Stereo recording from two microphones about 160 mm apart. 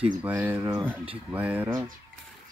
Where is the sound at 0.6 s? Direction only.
20° right (ahead or behind).